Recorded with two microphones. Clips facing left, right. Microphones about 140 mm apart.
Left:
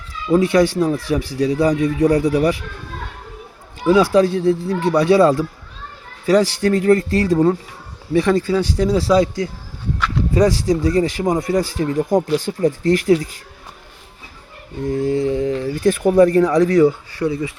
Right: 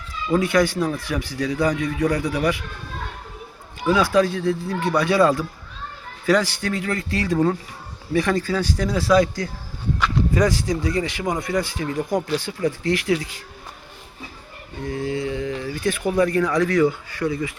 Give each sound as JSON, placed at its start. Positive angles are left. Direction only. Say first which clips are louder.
{"t": 0.3, "sound": "speech", "louder": "left 5 dB", "side_deg": 30}
{"t": 3.8, "sound": "speech", "louder": "left 5 dB", "side_deg": 35}
{"t": 8.1, "sound": "speech", "louder": "left 5 dB", "side_deg": 25}
{"t": 14.8, "sound": "speech", "louder": "left 7 dB", "side_deg": 40}